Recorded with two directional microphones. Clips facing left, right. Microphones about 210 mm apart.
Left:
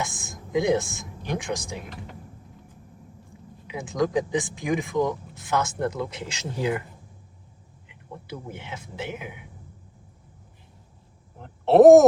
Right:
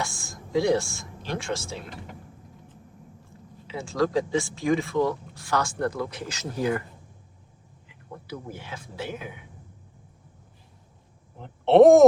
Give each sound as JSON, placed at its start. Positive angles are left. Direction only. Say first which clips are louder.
{"t": 0.0, "sound": "speech", "louder": "left 1 dB", "side_deg": 20}
{"t": 3.7, "sound": "speech", "louder": "even", "side_deg": 15}
{"t": 8.4, "sound": "speech", "louder": "left 1 dB", "side_deg": 20}
{"t": 11.3, "sound": "a sound", "louder": "even", "side_deg": 0}